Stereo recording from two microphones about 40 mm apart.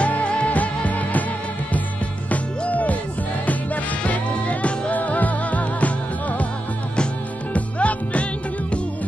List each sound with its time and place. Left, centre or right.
0.0 s music: left
0.8 s music: left
2.2 s hoot: left
3.4 s music: left
7.5 s music: left